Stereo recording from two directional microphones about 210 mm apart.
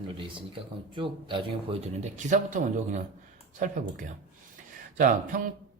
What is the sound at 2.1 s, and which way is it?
Speech, 35° right (ahead or behind).